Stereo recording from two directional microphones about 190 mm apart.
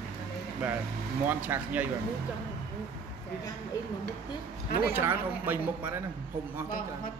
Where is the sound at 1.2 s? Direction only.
10° right (ahead or behind).